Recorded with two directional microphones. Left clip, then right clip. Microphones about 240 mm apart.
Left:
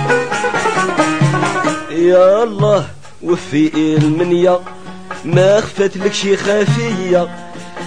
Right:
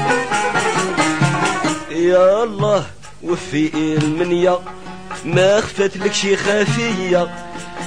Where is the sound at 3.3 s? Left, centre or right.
Centre.